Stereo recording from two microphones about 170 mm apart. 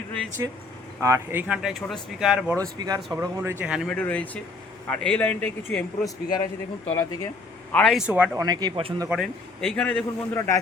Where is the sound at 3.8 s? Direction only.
5° left (ahead or behind).